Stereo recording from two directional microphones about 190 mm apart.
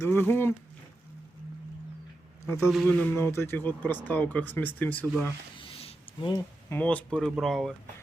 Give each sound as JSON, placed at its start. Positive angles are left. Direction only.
{"t": 0.0, "sound": "speech", "side_deg": 10}
{"t": 2.6, "sound": "speech", "side_deg": 0}
{"t": 5.5, "sound": "a sound", "side_deg": 30}
{"t": 6.7, "sound": "speech", "side_deg": 10}